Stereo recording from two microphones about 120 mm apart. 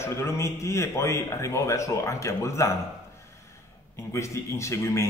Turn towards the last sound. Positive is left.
turn(degrees=25)  # may be behind; listen again after turning